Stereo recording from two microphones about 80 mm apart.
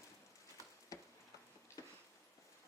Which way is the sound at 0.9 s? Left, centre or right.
Left.